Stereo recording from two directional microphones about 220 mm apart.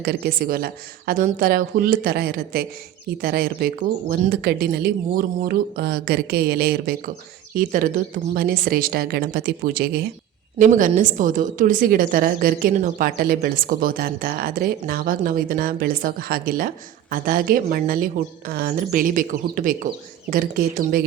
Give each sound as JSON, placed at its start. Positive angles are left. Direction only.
{"t": 0.0, "sound": "a woman's voice", "side_deg": -45}